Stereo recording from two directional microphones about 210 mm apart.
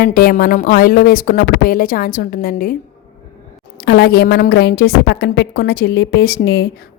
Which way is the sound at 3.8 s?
50° left (ahead or behind).